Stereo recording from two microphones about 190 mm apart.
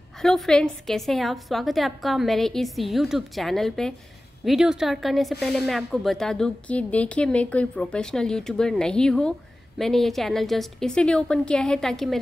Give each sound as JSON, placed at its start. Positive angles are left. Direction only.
{"t": 0.2, "sound": "a woman's voice", "side_deg": 0}